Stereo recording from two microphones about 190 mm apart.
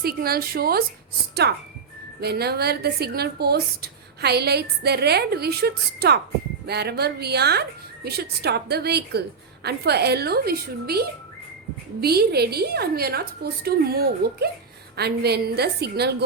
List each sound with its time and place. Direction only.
0.0 s a woman's voice: 55° right (ahead or behind)